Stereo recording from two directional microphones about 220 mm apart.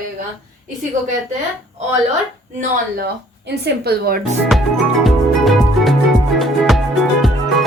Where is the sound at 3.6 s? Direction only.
45° right (ahead or behind).